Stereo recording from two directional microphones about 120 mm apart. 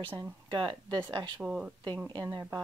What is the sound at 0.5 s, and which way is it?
Speech, 40° right (ahead or behind).